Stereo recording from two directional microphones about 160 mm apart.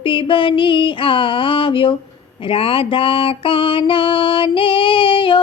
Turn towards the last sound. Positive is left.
turn(degrees=35)  # may be behind; listen again after turning